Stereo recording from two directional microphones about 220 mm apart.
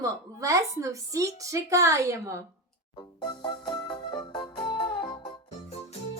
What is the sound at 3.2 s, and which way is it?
Music, 20° left (ahead or behind).